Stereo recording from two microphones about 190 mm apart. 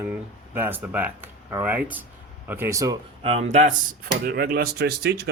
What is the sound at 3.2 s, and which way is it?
Speech, 35° right (ahead or behind).